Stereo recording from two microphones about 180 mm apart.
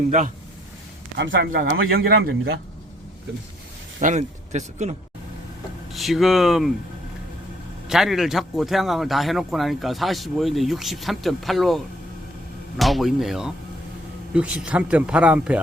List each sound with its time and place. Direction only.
1.2 s speech: 55° right (ahead or behind)
4.0 s speech: 40° right (ahead or behind)
5.9 s a man's voice: centre (ahead or behind)
7.9 s a man's voice: centre (ahead or behind)